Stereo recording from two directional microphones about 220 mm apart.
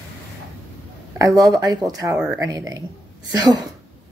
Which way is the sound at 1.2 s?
15° right (ahead or behind).